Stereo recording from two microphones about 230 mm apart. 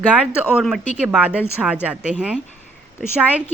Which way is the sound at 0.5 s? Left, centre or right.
Centre.